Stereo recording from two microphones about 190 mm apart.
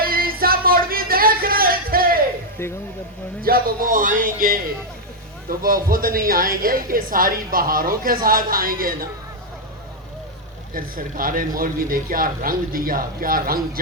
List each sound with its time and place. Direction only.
0.0 s a sound: 50° right (ahead or behind)
2.6 s speech: 15° left (ahead or behind)
3.4 s a woman's voice: 50° right (ahead or behind)
10.8 s a woman's voice: 50° right (ahead or behind)